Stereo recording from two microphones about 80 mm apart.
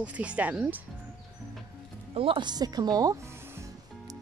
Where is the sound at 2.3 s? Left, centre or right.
Right.